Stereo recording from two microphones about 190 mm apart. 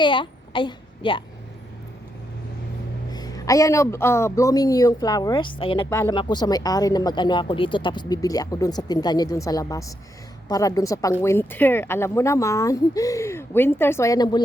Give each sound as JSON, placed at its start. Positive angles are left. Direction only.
{"t": 0.0, "sound": "a child's voice", "side_deg": 25}
{"t": 3.1, "sound": "speech", "side_deg": 20}
{"t": 5.9, "sound": "speech", "side_deg": 15}